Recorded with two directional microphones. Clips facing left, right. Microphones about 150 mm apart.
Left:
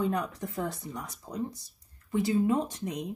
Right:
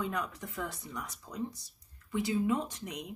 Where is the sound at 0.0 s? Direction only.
35° left (ahead or behind).